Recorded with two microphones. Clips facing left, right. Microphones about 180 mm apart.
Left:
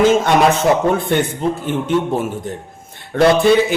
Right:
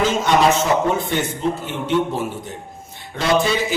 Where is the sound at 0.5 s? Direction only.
55° left (ahead or behind).